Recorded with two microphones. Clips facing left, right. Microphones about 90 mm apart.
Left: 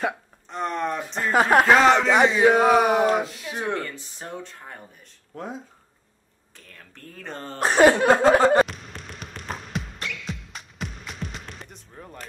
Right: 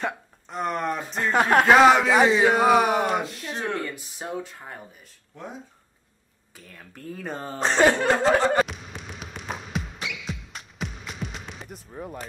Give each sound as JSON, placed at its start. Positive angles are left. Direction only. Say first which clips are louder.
{"t": 0.0, "sound": "speech", "louder": "left 3 dB", "side_deg": -5}
{"t": 3.5, "sound": "speech", "louder": "left 2 dB", "side_deg": 15}
{"t": 3.8, "sound": "speech", "louder": "right 2 dB", "side_deg": -10}
{"t": 6.5, "sound": "speech", "louder": "right 3 dB", "side_deg": -5}
{"t": 7.5, "sound": "speech", "louder": "left 3 dB", "side_deg": 5}
{"t": 8.6, "sound": "music", "louder": "right 1 dB", "side_deg": 0}